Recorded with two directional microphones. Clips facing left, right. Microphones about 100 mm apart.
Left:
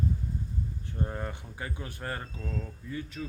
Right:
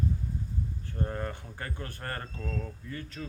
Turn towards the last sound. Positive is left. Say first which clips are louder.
# left 3 dB
turn(degrees=10)  # may be behind; listen again after turning